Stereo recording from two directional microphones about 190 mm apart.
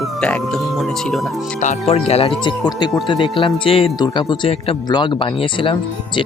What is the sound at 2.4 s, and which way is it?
Speech, 20° left (ahead or behind).